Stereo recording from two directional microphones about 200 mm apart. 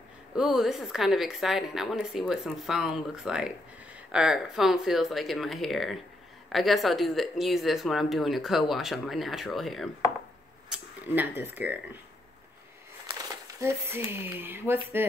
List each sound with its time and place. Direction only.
0.4 s speech: centre (ahead or behind)
13.6 s speech: 10° right (ahead or behind)